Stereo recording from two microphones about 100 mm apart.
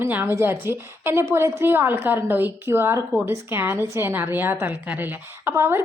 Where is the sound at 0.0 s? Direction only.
20° right (ahead or behind).